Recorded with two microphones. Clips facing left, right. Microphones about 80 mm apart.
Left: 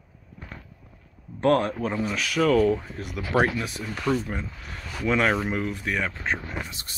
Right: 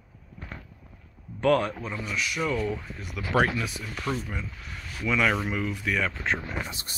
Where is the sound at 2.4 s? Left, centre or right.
Left.